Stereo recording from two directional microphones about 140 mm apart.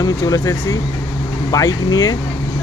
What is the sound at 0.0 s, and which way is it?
Speech, 25° left (ahead or behind).